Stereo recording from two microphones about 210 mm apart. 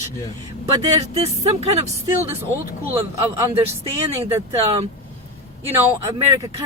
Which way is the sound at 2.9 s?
10° right (ahead or behind).